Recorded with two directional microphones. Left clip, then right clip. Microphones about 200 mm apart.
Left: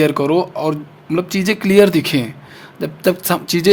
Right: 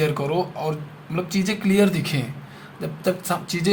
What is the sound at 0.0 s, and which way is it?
Speech, 55° left (ahead or behind).